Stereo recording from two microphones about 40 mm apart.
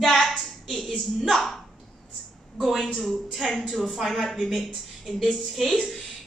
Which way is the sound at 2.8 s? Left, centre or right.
Centre.